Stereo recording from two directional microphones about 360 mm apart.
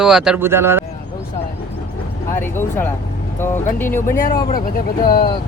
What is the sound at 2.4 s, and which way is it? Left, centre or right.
A man's voice, centre.